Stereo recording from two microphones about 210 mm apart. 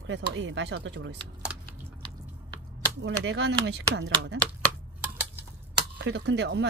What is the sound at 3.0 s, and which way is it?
Speech, 55° right (ahead or behind).